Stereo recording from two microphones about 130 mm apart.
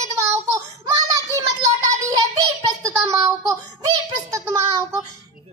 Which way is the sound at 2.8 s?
25° right (ahead or behind).